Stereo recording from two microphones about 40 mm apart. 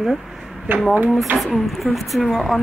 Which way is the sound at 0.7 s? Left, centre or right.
Right.